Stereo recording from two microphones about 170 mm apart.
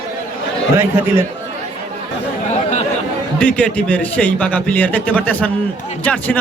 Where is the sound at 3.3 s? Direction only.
5° left (ahead or behind).